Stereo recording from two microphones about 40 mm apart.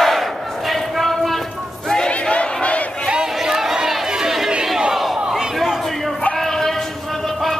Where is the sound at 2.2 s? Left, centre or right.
Left.